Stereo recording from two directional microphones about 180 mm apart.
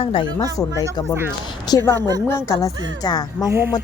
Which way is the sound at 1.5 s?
20° left (ahead or behind).